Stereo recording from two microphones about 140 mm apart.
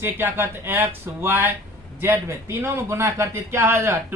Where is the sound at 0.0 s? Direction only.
15° right (ahead or behind).